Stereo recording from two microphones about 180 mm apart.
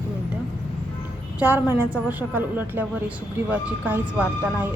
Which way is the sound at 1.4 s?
10° right (ahead or behind).